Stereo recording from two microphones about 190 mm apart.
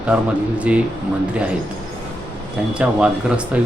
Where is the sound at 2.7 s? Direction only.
5° right (ahead or behind).